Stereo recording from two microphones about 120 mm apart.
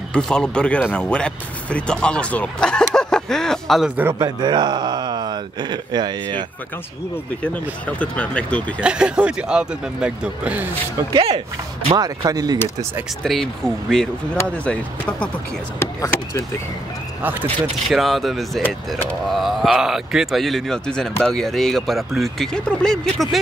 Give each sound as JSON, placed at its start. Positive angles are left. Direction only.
{"t": 0.1, "sound": "speech", "side_deg": 5}
{"t": 4.1, "sound": "speech", "side_deg": -35}
{"t": 7.4, "sound": "speech", "side_deg": 10}
{"t": 8.8, "sound": "speech", "side_deg": -10}
{"t": 11.1, "sound": "speech", "side_deg": -55}
{"t": 12.0, "sound": "speech", "side_deg": -35}
{"t": 13.2, "sound": "speech", "side_deg": 5}
{"t": 14.3, "sound": "speech", "side_deg": 15}
{"t": 15.8, "sound": "speech", "side_deg": 20}
{"t": 17.2, "sound": "speech", "side_deg": -15}
{"t": 17.8, "sound": "speech", "side_deg": 0}